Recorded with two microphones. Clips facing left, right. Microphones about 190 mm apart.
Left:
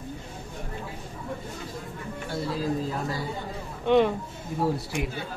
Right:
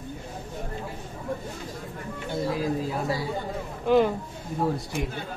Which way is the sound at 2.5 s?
15° right (ahead or behind).